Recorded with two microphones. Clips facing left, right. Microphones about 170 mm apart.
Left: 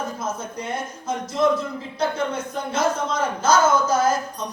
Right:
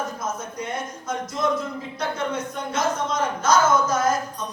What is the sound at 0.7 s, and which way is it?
Speech, 30° left (ahead or behind).